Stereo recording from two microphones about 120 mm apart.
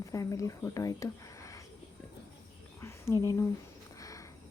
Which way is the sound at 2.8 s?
20° left (ahead or behind).